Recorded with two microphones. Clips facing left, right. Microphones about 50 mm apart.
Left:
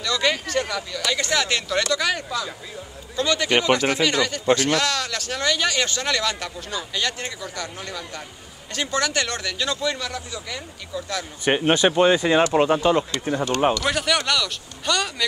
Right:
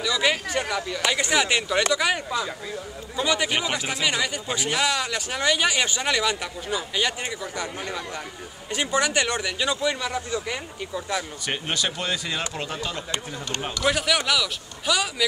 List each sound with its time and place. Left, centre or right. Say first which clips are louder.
0.0 s speech: even; centre
11.4 s speech: left 14 dB; left
13.8 s speech: even; centre